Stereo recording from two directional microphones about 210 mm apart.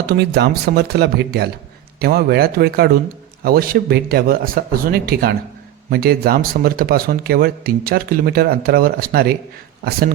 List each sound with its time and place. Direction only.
0.1 s speech: 50° right (ahead or behind)